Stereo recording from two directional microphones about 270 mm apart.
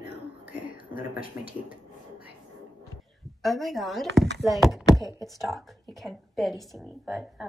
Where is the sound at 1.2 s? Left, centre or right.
Left.